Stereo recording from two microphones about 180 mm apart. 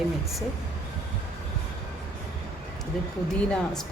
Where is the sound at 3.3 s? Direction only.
5° left (ahead or behind).